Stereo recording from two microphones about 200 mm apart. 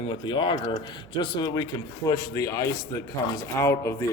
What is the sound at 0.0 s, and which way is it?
A man's voice, 25° left (ahead or behind).